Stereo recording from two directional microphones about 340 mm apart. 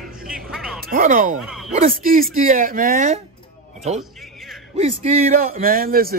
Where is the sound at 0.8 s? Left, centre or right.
Right.